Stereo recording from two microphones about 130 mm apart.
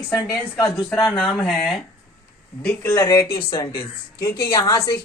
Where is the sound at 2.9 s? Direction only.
25° left (ahead or behind).